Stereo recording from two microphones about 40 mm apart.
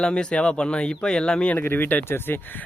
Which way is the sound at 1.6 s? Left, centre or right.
Left.